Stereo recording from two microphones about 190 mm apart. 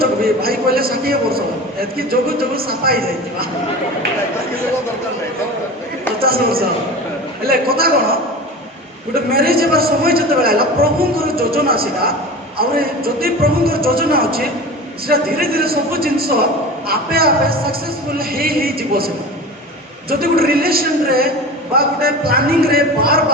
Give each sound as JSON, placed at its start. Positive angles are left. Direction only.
{"t": 0.0, "sound": "a man's voice", "side_deg": -50}
{"t": 6.2, "sound": "a man's voice", "side_deg": -50}
{"t": 9.3, "sound": "a man's voice", "side_deg": -50}